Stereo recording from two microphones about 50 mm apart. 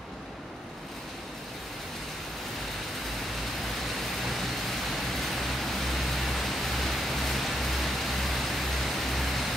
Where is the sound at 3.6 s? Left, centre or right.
Centre.